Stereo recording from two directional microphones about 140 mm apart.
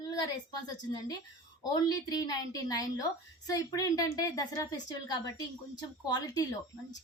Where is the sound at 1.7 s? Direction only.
30° left (ahead or behind).